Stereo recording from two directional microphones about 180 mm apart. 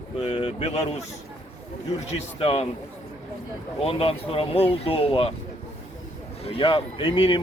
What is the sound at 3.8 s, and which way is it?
Speech, 30° left (ahead or behind).